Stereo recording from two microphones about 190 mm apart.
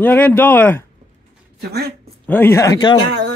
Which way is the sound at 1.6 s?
60° right (ahead or behind).